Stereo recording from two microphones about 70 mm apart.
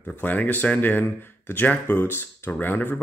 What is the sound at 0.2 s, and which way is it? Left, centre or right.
Speech, left.